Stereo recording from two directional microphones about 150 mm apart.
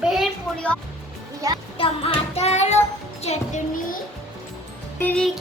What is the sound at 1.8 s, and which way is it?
Music, 40° left (ahead or behind).